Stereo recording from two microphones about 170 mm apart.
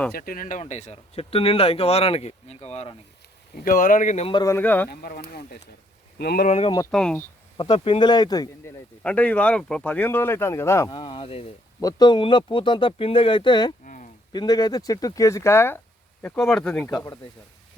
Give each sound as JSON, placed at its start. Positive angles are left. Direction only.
{"t": 0.1, "sound": "speech", "side_deg": 60}
{"t": 0.6, "sound": "speech", "side_deg": 40}
{"t": 3.5, "sound": "speech", "side_deg": 55}
{"t": 4.3, "sound": "speech", "side_deg": 25}
{"t": 4.5, "sound": "speech", "side_deg": 10}
{"t": 4.9, "sound": "speech", "side_deg": 60}
{"t": 6.9, "sound": "speech", "side_deg": 5}
{"t": 7.5, "sound": "speech", "side_deg": 25}
{"t": 9.0, "sound": "speech", "side_deg": 10}
{"t": 10.9, "sound": "speech", "side_deg": 30}
{"t": 11.8, "sound": "speech", "side_deg": 20}
{"t": 13.8, "sound": "a sound", "side_deg": 50}
{"t": 14.3, "sound": "speech", "side_deg": 25}
{"t": 16.9, "sound": "speech", "side_deg": 20}